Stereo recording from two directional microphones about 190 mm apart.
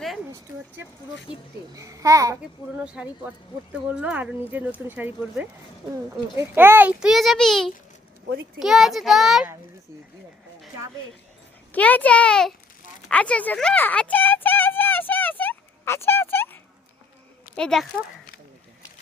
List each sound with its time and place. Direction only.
1.7 s speech: 15° right (ahead or behind)
2.8 s a child's voice: 5° right (ahead or behind)
11.7 s a child's voice: 10° left (ahead or behind)
13.1 s a sound: 5° left (ahead or behind)
17.5 s speech: 5° left (ahead or behind)